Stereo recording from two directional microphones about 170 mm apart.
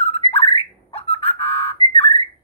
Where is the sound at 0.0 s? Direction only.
35° left (ahead or behind).